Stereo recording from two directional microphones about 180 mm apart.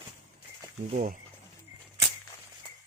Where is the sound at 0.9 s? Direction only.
40° right (ahead or behind).